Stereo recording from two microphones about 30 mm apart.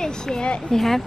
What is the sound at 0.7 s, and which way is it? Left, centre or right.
Speech, centre.